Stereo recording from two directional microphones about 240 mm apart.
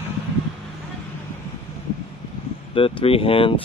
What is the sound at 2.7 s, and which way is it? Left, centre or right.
Speech, left.